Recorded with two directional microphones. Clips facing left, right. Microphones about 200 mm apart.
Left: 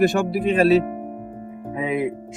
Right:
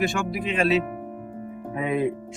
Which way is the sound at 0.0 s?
40° left (ahead or behind).